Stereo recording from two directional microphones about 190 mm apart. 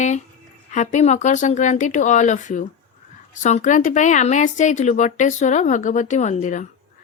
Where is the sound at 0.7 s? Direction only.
40° left (ahead or behind).